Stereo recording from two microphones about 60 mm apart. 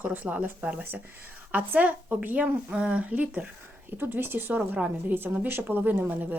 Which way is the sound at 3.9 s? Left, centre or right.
Right.